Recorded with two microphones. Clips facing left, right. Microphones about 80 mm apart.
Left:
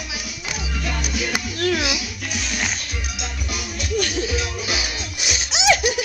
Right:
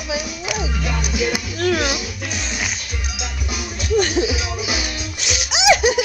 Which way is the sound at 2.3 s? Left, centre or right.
Right.